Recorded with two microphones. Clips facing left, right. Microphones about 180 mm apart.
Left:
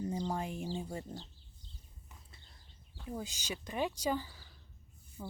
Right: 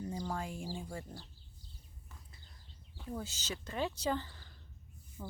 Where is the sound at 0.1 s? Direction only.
20° left (ahead or behind).